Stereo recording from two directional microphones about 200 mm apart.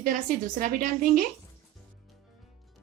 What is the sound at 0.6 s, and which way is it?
Speech, 40° right (ahead or behind).